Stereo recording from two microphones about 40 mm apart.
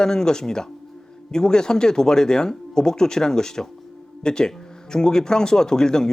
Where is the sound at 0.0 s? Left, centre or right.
Centre.